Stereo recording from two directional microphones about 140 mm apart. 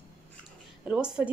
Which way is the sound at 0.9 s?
5° right (ahead or behind).